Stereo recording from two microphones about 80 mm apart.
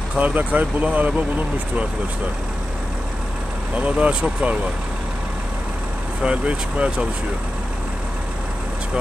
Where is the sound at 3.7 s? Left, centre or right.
Centre.